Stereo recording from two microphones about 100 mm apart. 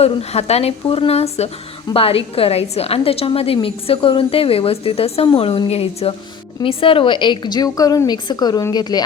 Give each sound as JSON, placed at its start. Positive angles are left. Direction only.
{"t": 0.0, "sound": "speech", "side_deg": 90}
{"t": 1.9, "sound": "a woman's voice", "side_deg": 70}
{"t": 5.6, "sound": "a woman's voice", "side_deg": 85}
{"t": 6.6, "sound": "a woman's voice", "side_deg": 65}